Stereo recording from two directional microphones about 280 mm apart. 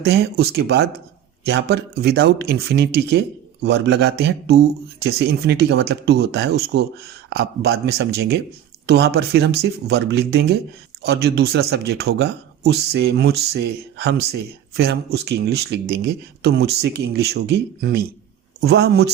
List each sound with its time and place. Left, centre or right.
0.0 s speech: right